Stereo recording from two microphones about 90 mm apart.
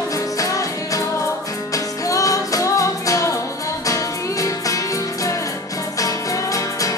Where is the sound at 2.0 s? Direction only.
40° left (ahead or behind).